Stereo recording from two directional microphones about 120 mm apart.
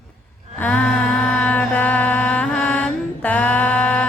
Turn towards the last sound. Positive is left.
turn(degrees=10)  # may be behind; listen again after turning